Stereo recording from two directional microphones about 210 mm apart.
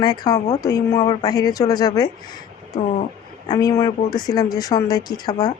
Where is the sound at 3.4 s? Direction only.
20° left (ahead or behind).